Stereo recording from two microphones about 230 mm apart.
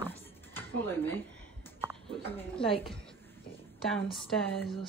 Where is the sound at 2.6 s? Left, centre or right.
Left.